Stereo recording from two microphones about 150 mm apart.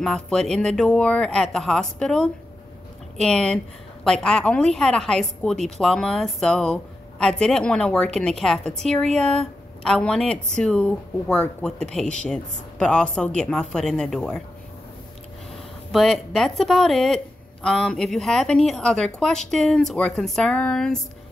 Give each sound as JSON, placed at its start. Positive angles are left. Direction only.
{"t": 0.0, "sound": "a woman's voice", "side_deg": 5}
{"t": 15.9, "sound": "a woman's voice", "side_deg": 0}